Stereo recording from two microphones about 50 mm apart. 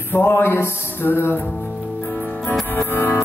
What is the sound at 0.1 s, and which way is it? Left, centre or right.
Music, left.